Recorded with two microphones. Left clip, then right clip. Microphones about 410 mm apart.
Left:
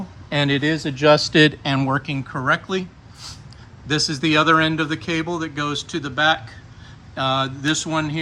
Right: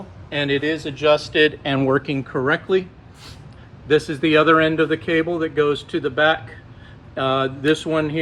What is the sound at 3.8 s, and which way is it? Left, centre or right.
Speech, centre.